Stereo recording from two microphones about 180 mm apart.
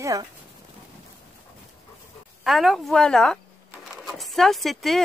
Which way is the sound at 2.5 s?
Centre (ahead or behind).